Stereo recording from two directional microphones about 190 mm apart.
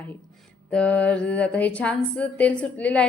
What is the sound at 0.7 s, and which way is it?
A woman's voice, 5° left (ahead or behind).